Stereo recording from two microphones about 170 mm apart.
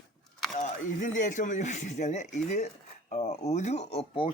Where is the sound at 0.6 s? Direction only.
45° left (ahead or behind).